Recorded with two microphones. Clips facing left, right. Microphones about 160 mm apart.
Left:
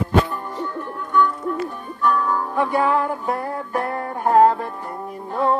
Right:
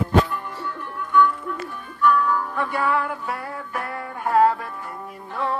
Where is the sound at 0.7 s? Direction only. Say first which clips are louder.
Right 1 dB; 40° left (ahead or behind).